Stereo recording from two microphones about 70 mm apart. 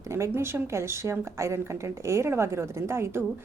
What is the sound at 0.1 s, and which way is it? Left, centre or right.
A woman's voice, right.